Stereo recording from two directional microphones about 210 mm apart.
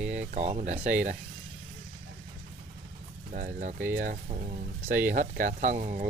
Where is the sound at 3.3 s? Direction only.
40° right (ahead or behind).